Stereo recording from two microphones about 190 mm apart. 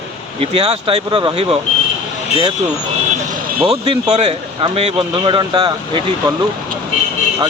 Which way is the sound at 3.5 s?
30° right (ahead or behind).